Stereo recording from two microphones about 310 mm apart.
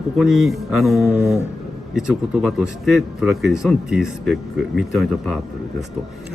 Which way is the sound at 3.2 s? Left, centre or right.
Centre.